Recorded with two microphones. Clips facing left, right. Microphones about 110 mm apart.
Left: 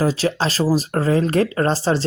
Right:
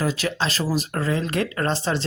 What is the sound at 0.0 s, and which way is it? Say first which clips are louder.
Speech: left 5 dB; 35° left (ahead or behind).